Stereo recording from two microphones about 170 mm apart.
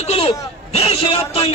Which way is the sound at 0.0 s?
35° left (ahead or behind).